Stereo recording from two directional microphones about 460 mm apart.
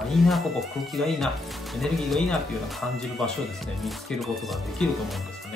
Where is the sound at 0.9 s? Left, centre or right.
Centre.